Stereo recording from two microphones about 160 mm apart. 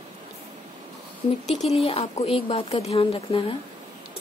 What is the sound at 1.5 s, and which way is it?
Speech, 40° left (ahead or behind).